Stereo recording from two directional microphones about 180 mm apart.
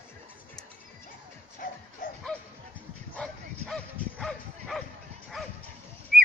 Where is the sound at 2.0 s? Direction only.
50° left (ahead or behind).